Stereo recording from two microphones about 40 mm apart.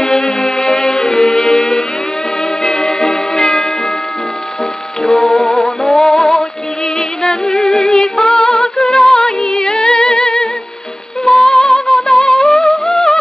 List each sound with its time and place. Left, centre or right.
0.0 s music: centre
5.0 s music: centre
8.4 s humming: centre
8.9 s music: centre